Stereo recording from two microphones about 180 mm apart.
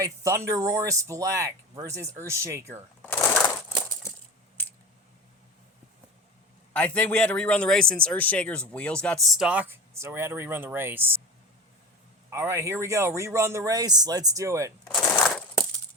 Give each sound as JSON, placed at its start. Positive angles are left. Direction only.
{"t": 0.0, "sound": "speech", "side_deg": -15}
{"t": 3.1, "sound": "crushing", "side_deg": 10}
{"t": 4.0, "sound": "coin", "side_deg": 15}
{"t": 6.7, "sound": "speech", "side_deg": 10}
{"t": 12.3, "sound": "speech", "side_deg": -15}
{"t": 14.9, "sound": "crushing", "side_deg": 15}
{"t": 15.2, "sound": "crushing", "side_deg": 5}